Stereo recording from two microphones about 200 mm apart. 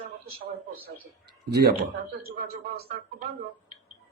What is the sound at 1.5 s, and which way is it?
Speech, 55° right (ahead or behind).